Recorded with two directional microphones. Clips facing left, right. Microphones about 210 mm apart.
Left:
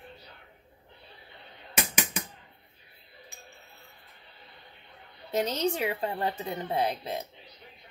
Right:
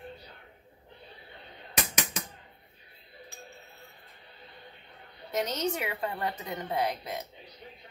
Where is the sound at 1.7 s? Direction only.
5° left (ahead or behind).